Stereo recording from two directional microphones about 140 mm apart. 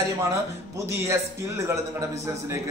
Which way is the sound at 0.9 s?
20° right (ahead or behind).